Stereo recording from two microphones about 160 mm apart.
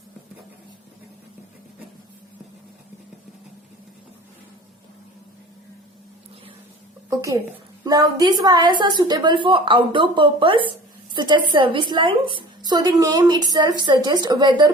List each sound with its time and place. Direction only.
7.1 s a woman's voice: 20° right (ahead or behind)